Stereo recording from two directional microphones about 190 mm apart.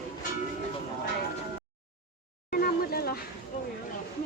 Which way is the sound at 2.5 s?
50° left (ahead or behind).